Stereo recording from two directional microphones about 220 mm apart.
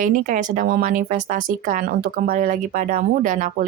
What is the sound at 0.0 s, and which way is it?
Speech, 35° right (ahead or behind).